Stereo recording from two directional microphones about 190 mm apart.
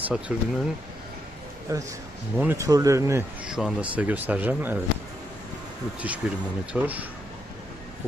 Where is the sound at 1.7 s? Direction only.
15° right (ahead or behind).